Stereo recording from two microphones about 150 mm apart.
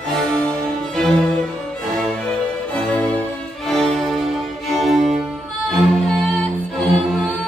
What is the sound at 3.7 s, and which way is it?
Music, 5° left (ahead or behind).